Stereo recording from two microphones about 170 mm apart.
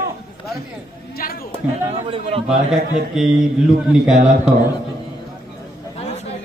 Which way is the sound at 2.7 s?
Centre (ahead or behind).